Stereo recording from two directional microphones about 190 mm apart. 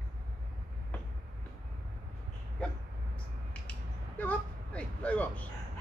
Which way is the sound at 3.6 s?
10° left (ahead or behind).